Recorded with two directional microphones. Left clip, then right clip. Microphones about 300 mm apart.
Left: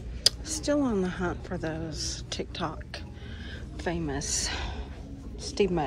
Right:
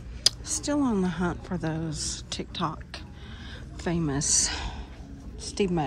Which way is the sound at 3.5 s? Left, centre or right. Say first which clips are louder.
Right 1 dB; centre.